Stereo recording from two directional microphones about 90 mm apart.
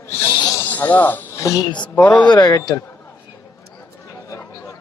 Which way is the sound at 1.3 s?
40° left (ahead or behind).